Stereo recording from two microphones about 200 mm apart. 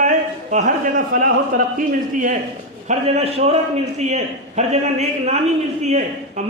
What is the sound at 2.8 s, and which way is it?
A man's voice, 35° right (ahead or behind).